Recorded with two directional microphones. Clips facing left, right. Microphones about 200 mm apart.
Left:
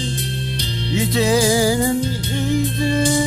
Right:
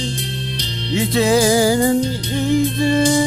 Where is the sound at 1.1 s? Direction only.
55° right (ahead or behind).